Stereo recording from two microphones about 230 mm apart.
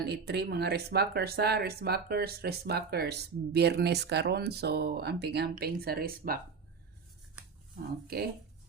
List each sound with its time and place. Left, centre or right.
0.0 s speech: right